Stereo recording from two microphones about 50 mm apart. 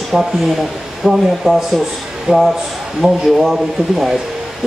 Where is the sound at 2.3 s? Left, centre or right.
Right.